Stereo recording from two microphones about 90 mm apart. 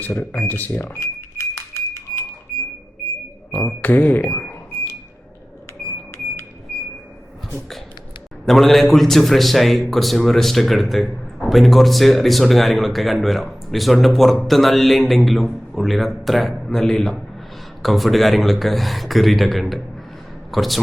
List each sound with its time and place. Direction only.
0.0 s cash register: 20° left (ahead or behind)
3.7 s speech: 20° left (ahead or behind)
8.4 s a man's voice: centre (ahead or behind)